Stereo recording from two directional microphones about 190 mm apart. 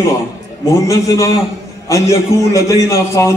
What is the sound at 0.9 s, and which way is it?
Speech, 15° left (ahead or behind).